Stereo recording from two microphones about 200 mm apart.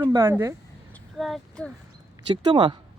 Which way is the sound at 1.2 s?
Centre (ahead or behind).